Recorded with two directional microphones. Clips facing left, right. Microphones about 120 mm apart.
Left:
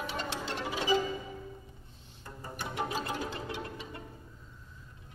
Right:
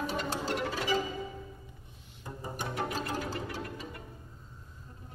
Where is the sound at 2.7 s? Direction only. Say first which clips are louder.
Left 1 dB; 15° left (ahead or behind).